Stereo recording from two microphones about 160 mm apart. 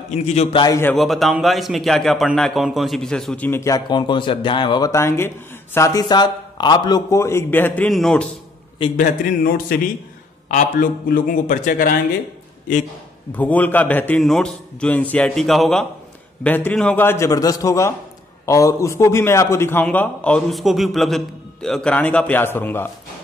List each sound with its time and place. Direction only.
0.1 s a man's voice: 40° left (ahead or behind)
0.7 s a man's voice: 15° left (ahead or behind)
0.9 s a man's voice: centre (ahead or behind)
8.9 s a man's voice: 60° left (ahead or behind)
13.4 s a man's voice: 10° left (ahead or behind)